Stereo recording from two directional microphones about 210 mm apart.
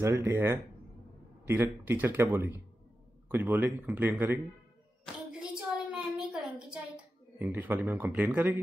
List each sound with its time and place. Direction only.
0.0 s a man's voice: 10° right (ahead or behind)
5.0 s hands: 5° right (ahead or behind)
7.3 s a man's voice: 10° right (ahead or behind)